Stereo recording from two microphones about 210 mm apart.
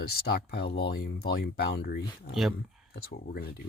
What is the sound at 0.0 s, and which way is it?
Speech, 50° left (ahead or behind).